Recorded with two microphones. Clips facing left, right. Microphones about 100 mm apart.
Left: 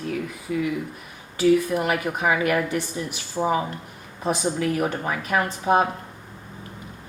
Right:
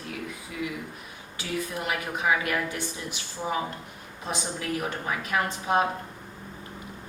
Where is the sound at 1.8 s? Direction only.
55° left (ahead or behind).